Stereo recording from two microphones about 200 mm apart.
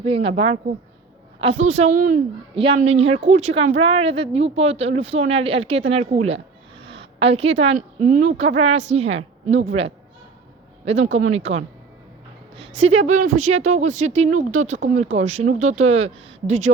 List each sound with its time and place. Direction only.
0.0 s a woman's voice: 30° right (ahead or behind)
2.6 s speech: 30° right (ahead or behind)
6.8 s a sound: 60° right (ahead or behind)
7.2 s speech: 30° right (ahead or behind)
11.0 s speech: 35° right (ahead or behind)
12.5 s speech: 30° right (ahead or behind)